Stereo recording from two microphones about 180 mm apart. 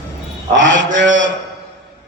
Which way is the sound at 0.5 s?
90° right.